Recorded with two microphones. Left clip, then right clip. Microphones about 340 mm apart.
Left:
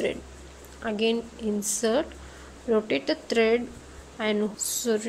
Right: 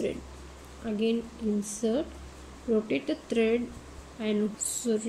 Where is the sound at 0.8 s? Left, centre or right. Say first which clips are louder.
Left 4 dB; centre.